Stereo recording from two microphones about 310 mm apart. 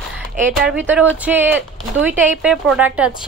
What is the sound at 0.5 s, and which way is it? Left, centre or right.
Speech, centre.